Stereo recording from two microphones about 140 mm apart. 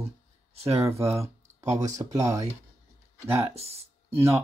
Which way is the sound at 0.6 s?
45° right (ahead or behind).